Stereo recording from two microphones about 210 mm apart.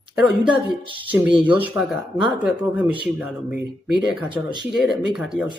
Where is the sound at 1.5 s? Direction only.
10° right (ahead or behind).